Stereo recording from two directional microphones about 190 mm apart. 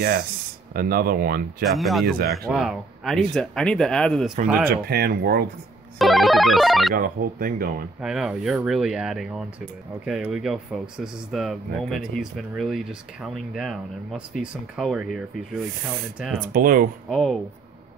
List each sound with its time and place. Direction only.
0.7 s speech: 50° right (ahead or behind)
1.7 s speech: centre (ahead or behind)
4.6 s speech: 55° right (ahead or behind)
5.9 s speech: centre (ahead or behind)
7.0 s speech: 50° right (ahead or behind)
8.0 s speech: 5° right (ahead or behind)
16.5 s speech: 50° right (ahead or behind)
17.1 s speech: centre (ahead or behind)